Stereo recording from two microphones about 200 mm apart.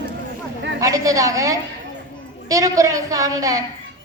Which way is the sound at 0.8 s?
15° right (ahead or behind).